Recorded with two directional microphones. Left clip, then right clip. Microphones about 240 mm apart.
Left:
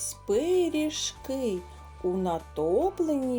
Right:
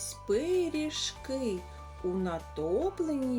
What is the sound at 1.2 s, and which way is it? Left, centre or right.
Speech, left.